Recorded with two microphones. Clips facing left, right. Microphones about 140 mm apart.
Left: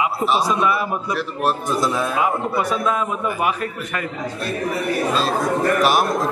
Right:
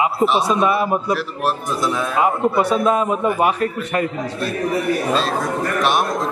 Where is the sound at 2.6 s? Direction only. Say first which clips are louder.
Right 5 dB; 30° right (ahead or behind).